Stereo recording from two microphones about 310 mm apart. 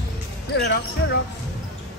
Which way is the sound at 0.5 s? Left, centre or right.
Left.